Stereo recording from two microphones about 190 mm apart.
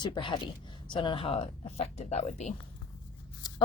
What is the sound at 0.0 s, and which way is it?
Speech, 25° left (ahead or behind).